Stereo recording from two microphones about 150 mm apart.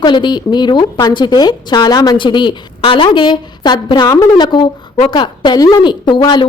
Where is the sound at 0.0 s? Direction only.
30° left (ahead or behind).